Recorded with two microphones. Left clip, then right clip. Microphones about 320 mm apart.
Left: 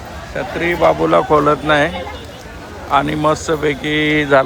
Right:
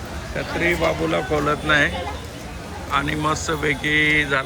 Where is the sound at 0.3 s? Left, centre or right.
Centre.